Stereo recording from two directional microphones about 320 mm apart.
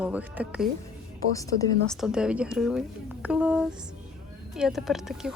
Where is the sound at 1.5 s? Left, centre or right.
Right.